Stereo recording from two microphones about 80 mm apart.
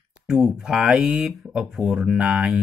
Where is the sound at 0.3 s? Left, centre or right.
Centre.